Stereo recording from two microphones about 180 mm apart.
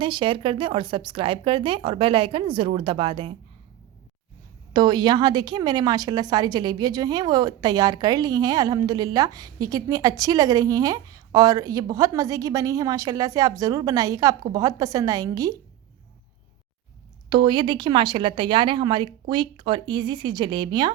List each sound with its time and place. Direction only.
0.0 s a woman's voice: 30° right (ahead or behind)
4.7 s a woman's voice: 25° right (ahead or behind)
17.2 s a woman's voice: 25° right (ahead or behind)